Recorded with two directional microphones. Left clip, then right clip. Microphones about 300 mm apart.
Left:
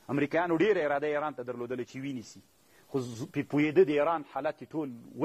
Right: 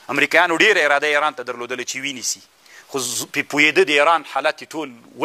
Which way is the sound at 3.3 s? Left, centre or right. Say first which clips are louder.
Right 11 dB; centre.